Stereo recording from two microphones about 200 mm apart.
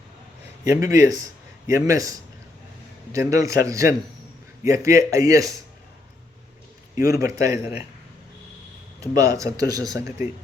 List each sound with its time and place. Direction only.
0.6 s a man's voice: 15° right (ahead or behind)
7.1 s speech: 15° right (ahead or behind)
9.0 s speech: 20° right (ahead or behind)